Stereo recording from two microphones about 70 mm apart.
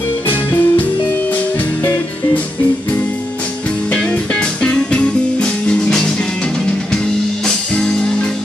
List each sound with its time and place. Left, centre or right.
0.3 s music: left
3.9 s music: centre
7.4 s music: centre